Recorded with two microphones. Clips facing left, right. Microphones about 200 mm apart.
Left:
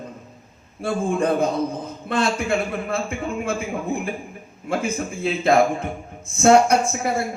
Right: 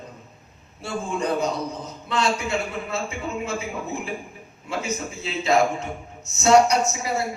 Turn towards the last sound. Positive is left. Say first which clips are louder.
# left 3 dB
turn(degrees=55)  # may be behind; listen again after turning